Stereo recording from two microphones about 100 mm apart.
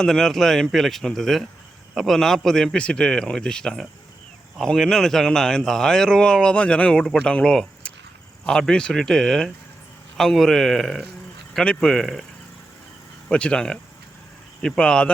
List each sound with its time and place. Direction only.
0.0 s a man's voice: 5° left (ahead or behind)
13.2 s a man's voice: 10° left (ahead or behind)